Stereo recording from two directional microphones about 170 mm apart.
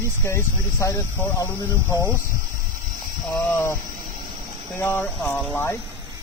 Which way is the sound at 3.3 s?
15° left (ahead or behind).